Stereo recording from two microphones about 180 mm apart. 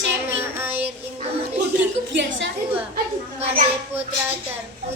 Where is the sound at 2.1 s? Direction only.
85° right.